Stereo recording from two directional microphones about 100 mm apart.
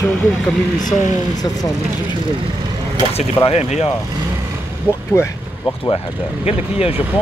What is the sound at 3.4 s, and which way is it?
Speech, 85° left.